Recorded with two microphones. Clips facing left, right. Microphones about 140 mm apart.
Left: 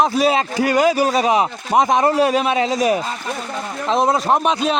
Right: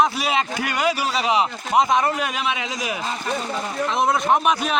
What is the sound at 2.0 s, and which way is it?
A man's voice, 35° left (ahead or behind).